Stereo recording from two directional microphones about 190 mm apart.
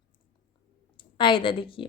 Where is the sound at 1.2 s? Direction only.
25° left (ahead or behind).